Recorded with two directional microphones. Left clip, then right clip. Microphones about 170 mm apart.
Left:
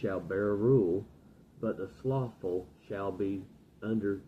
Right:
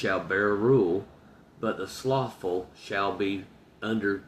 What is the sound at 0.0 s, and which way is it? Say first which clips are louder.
Speech: right 7 dB; 15° right (ahead or behind).